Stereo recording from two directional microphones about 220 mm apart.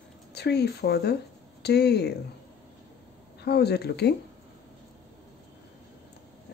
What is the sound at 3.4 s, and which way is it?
Speech, 45° left (ahead or behind).